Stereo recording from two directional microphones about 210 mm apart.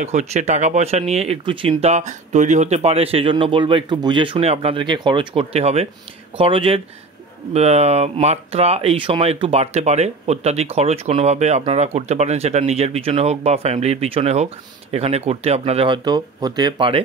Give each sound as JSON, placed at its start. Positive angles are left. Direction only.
{"t": 0.0, "sound": "speech", "side_deg": -30}